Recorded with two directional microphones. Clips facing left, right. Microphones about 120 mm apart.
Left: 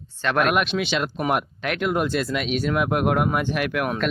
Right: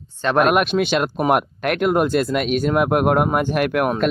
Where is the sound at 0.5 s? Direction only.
50° right (ahead or behind).